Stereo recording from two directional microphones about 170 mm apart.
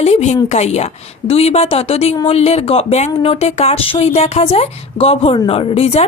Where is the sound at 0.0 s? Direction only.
40° left (ahead or behind).